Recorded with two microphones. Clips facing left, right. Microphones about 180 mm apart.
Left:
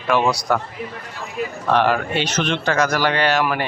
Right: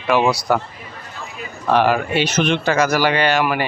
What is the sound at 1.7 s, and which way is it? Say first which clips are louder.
A man's voice: right 2 dB; 5° right (ahead or behind).